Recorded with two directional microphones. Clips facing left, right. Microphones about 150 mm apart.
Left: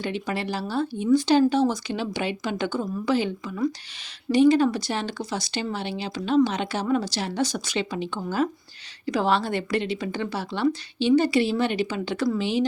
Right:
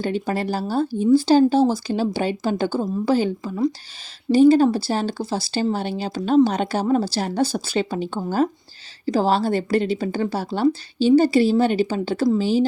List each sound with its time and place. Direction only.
0.0 s a woman's voice: 40° right (ahead or behind)